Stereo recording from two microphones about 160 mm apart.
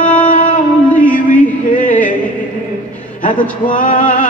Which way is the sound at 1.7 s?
55° left (ahead or behind).